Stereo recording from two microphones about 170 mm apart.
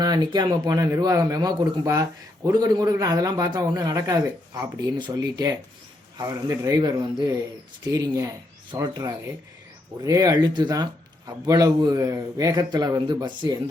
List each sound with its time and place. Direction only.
0.0 s speech: 25° right (ahead or behind)